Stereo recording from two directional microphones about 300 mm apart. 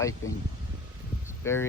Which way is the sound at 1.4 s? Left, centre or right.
Centre.